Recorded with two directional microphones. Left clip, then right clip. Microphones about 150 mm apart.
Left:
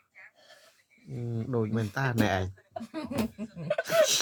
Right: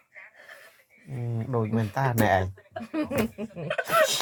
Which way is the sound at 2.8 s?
45° right (ahead or behind).